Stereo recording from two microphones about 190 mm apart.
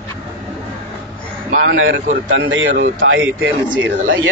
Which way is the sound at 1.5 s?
45° right (ahead or behind).